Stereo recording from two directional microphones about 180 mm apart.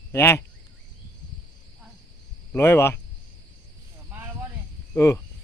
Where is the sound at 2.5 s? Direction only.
15° left (ahead or behind).